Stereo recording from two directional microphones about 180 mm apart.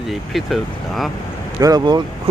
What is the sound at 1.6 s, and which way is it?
Speech, 20° right (ahead or behind).